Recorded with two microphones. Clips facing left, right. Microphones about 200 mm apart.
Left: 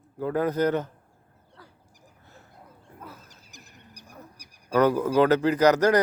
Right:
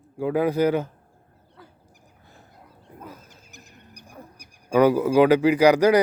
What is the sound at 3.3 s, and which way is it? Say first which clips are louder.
Wild animals: right 2 dB; 55° right (ahead or behind).